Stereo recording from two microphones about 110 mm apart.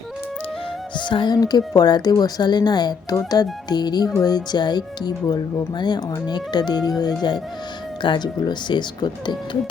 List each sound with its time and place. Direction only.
0.9 s speech: 45° left (ahead or behind)